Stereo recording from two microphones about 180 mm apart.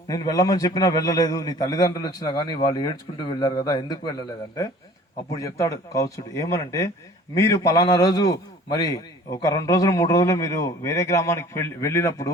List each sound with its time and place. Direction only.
0.1 s a man's voice: 20° left (ahead or behind)
5.3 s a man's voice: 20° left (ahead or behind)